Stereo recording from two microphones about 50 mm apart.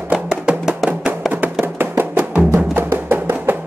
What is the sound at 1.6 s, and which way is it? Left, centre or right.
Music, right.